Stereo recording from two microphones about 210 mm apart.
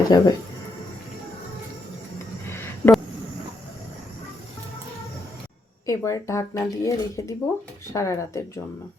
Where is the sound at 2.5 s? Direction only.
10° left (ahead or behind).